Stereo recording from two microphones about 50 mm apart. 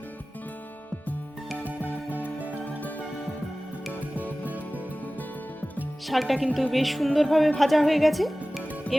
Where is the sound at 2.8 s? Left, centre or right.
Left.